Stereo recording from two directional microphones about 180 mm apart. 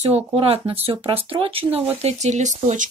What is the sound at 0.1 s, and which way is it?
Speech, 35° right (ahead or behind).